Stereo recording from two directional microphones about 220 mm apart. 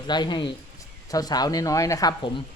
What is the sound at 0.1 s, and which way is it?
Speech, 20° left (ahead or behind).